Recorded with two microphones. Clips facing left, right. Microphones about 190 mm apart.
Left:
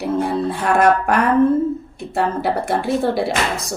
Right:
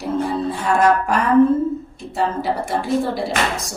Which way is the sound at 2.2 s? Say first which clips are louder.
Left 2 dB; 60° left (ahead or behind).